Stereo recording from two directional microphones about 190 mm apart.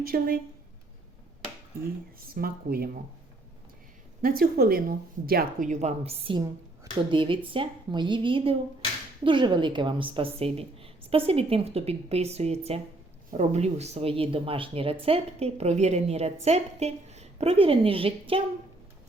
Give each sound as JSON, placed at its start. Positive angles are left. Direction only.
{"t": 0.0, "sound": "a woman's voice", "side_deg": -50}
{"t": 2.1, "sound": "a woman's voice", "side_deg": -50}
{"t": 4.2, "sound": "a woman's voice", "side_deg": -50}